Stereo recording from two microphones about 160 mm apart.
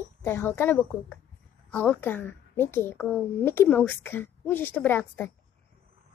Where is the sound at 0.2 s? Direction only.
15° left (ahead or behind).